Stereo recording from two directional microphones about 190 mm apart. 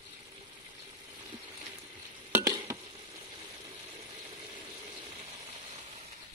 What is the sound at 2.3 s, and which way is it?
Frying, 20° right (ahead or behind).